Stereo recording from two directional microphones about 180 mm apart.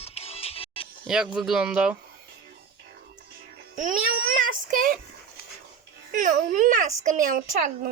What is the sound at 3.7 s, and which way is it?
A child's voice, 50° right (ahead or behind).